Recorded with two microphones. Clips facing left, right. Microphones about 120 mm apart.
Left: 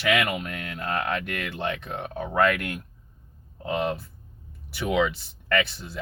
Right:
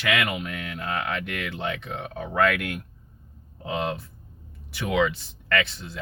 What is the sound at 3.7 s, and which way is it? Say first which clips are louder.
Speech: left 1 dB; 5° left (ahead or behind).